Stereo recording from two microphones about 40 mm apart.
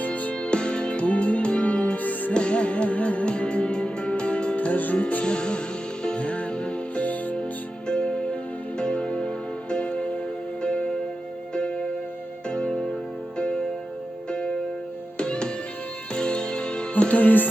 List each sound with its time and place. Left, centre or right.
0.0 s music: left
0.4 s music: left
2.0 s music: left
2.3 s music: left
4.5 s music: left
5.2 s music: left
6.9 s music: left
7.9 s music: left
12.5 s music: left
14.3 s music: left
17.0 s music: left
17.2 s music: left